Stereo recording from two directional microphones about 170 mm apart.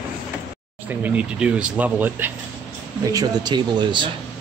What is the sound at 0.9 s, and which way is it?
Speech, 10° right (ahead or behind).